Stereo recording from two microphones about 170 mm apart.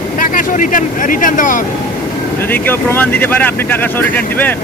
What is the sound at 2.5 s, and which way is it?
Speech, 10° left (ahead or behind).